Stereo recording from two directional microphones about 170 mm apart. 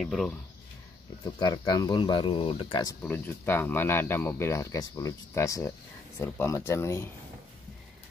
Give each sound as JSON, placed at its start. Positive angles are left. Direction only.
{"t": 0.0, "sound": "speech", "side_deg": 0}
{"t": 1.2, "sound": "speech", "side_deg": 25}
{"t": 3.0, "sound": "speech", "side_deg": 10}